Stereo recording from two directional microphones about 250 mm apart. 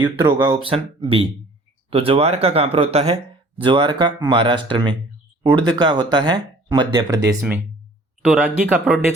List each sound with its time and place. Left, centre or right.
0.0 s speech: centre